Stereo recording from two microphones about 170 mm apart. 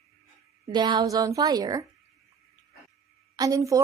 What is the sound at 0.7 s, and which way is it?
Speech, 25° right (ahead or behind).